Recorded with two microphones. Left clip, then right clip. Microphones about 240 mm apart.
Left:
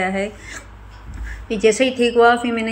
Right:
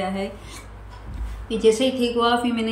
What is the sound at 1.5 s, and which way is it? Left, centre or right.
Speech, centre.